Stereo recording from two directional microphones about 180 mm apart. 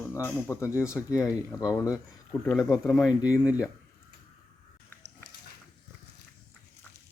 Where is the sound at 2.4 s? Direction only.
Centre (ahead or behind).